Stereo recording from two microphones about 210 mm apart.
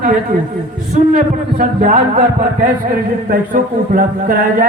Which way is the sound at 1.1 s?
40° right (ahead or behind).